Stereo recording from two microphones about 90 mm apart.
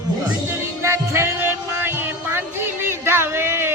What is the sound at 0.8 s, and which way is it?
Music, 30° right (ahead or behind).